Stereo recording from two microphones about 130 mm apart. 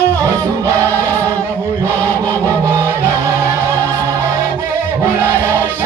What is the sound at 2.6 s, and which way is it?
Music, 25° right (ahead or behind).